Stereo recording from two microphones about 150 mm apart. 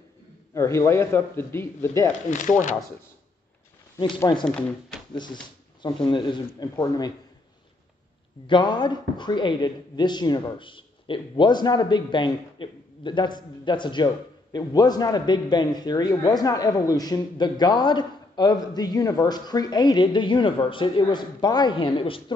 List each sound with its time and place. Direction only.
0.6 s a man's voice: 20° left (ahead or behind)
2.3 s speech: 55° left (ahead or behind)
4.0 s speech: 30° left (ahead or behind)
4.5 s speech: 5° left (ahead or behind)
5.1 s speech: 30° left (ahead or behind)
8.5 s speech: 30° left (ahead or behind)